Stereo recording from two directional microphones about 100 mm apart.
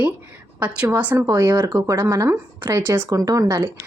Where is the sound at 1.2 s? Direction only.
30° right (ahead or behind).